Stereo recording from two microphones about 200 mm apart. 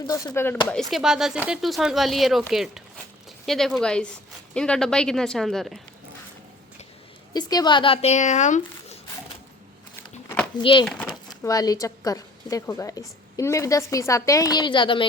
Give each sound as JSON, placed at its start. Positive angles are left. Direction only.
{"t": 0.1, "sound": "a woman's voice", "side_deg": 15}
{"t": 0.7, "sound": "speech", "side_deg": 0}
{"t": 7.3, "sound": "speech", "side_deg": 20}
{"t": 10.6, "sound": "speech", "side_deg": 25}
{"t": 10.8, "sound": "speech", "side_deg": 5}
{"t": 11.3, "sound": "a woman's voice", "side_deg": 20}